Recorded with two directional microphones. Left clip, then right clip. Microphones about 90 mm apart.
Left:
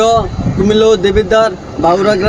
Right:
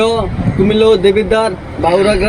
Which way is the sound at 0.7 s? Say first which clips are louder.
Even; 40° left (ahead or behind).